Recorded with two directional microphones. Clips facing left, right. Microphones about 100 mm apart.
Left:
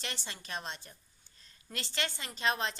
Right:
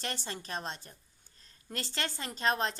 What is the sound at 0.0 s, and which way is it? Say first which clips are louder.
A woman's voice: right 4 dB; 45° right (ahead or behind).